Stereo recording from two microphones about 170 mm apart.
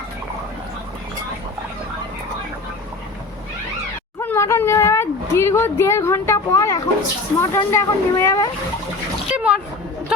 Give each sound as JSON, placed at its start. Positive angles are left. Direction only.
{"t": 4.2, "sound": "a sound", "side_deg": 15}
{"t": 7.3, "sound": "speech", "side_deg": 15}
{"t": 9.3, "sound": "speech", "side_deg": -5}